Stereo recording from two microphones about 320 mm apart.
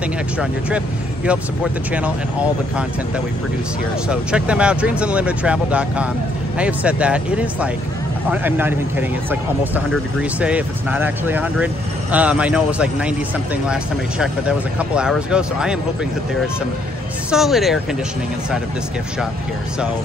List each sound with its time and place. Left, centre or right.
0.4 s speech: centre
4.1 s speech: centre
17.3 s speech: centre